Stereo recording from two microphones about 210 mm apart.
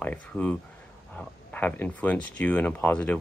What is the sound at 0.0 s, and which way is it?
Speech, 5° left (ahead or behind).